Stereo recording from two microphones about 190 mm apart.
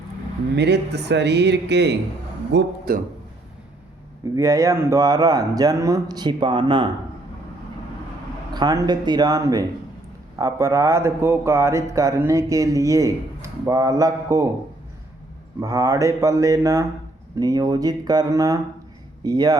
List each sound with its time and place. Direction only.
0.5 s speech: 60° right (ahead or behind)
4.4 s speech: 15° right (ahead or behind)
8.5 s a man's voice: 20° right (ahead or behind)
15.6 s a man's voice: 15° right (ahead or behind)